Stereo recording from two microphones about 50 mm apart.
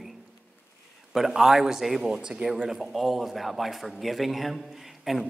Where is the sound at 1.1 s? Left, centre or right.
Centre.